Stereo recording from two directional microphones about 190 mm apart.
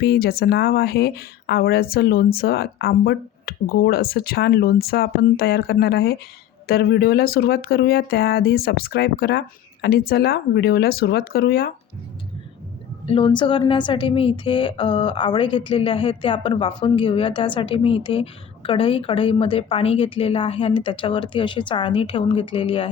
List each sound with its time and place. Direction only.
0.0 s speech: 55° left (ahead or behind)
13.1 s a woman's voice: 25° left (ahead or behind)